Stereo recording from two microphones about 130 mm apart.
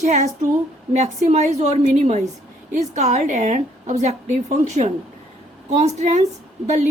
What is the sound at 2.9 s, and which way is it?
A woman's voice, 60° right (ahead or behind).